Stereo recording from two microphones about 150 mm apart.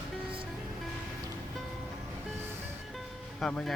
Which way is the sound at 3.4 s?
5° left (ahead or behind).